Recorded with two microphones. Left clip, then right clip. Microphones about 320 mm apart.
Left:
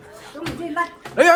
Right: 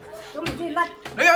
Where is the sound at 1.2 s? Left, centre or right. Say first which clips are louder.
Left 4 dB; centre.